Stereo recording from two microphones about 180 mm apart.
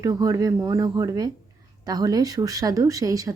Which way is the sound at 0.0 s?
20° right (ahead or behind).